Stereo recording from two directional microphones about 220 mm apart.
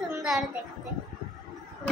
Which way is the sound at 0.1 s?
Centre (ahead or behind).